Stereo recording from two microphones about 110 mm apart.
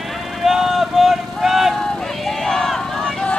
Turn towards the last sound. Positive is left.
turn(degrees=5)  # may be behind; listen again after turning